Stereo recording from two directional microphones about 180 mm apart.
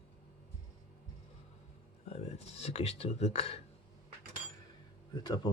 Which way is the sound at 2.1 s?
35° left (ahead or behind).